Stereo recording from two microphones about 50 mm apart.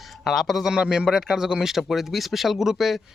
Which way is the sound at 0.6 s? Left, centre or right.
Centre.